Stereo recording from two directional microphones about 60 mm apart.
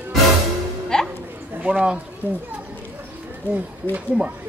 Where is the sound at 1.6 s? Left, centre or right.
Centre.